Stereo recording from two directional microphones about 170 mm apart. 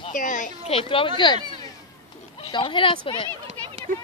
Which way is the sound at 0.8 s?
30° left (ahead or behind).